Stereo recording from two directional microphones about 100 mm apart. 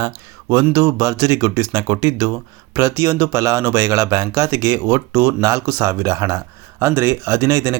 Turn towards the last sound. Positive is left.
turn(degrees=-30)  # may be behind; listen again after turning